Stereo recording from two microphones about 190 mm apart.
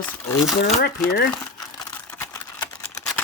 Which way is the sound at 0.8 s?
55° left (ahead or behind).